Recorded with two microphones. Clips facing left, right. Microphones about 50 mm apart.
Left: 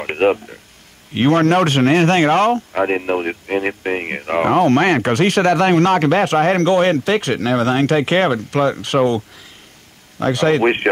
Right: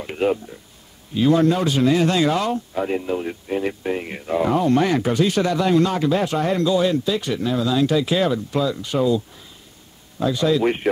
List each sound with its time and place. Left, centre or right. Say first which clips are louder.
0.0 s speech: left 5 dB; left